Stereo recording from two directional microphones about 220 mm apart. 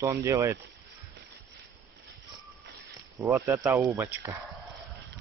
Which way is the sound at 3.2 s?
10° right (ahead or behind).